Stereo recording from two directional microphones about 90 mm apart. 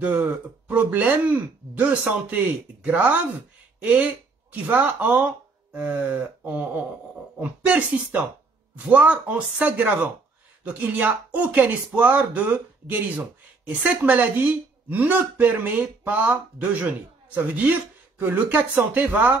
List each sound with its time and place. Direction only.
0.0 s speech: 20° right (ahead or behind)